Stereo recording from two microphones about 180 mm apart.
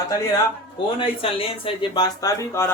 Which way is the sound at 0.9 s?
30° left (ahead or behind).